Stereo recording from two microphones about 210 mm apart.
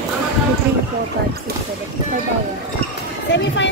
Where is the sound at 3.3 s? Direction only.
60° left (ahead or behind).